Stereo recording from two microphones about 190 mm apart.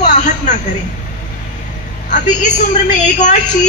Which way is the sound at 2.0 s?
40° left (ahead or behind).